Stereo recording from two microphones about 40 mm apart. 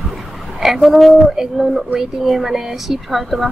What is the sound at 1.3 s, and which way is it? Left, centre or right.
A woman's voice, centre.